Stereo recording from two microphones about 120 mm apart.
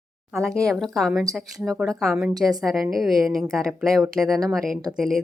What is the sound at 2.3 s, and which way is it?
Speech, 35° right (ahead or behind).